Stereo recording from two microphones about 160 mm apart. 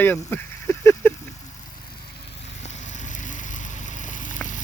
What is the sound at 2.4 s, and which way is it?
Vehicle, 45° left (ahead or behind).